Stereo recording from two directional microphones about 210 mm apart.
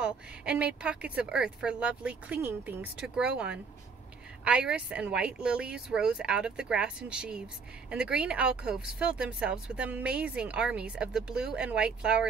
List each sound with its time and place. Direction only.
0.0 s speech: 5° right (ahead or behind)